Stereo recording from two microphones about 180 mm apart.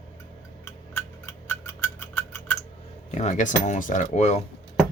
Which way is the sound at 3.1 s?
40° left (ahead or behind).